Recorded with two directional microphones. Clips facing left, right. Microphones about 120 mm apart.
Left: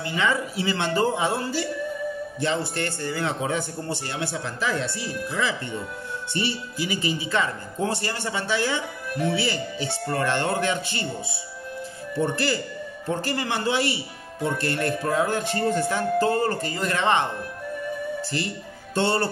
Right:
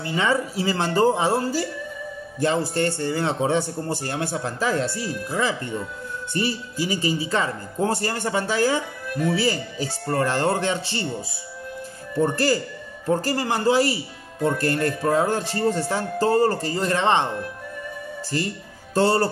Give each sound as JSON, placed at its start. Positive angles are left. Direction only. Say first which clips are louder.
{"t": 0.0, "sound": "speech", "louder": "right 2 dB", "side_deg": -30}
{"t": 18.9, "sound": "speech", "louder": "right 4 dB", "side_deg": -35}